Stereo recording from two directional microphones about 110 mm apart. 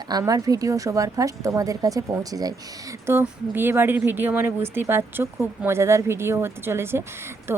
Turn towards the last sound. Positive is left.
turn(degrees=-20)  # may be behind; listen again after turning